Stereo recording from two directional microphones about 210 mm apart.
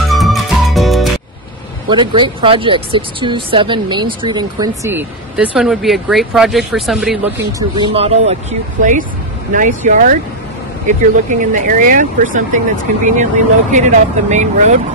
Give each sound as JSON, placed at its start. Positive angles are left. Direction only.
{"t": 0.1, "sound": "music", "side_deg": 0}
{"t": 1.9, "sound": "speech", "side_deg": -20}
{"t": 7.5, "sound": "speech", "side_deg": -20}